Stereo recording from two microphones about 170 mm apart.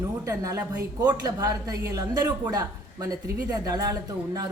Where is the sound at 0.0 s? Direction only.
20° right (ahead or behind).